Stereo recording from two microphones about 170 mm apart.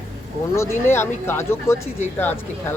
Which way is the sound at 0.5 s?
15° left (ahead or behind).